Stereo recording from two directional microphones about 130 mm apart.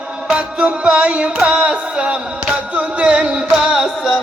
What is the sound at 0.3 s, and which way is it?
Music, 10° right (ahead or behind).